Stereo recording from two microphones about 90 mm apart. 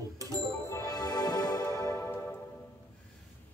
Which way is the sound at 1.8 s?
30° left (ahead or behind).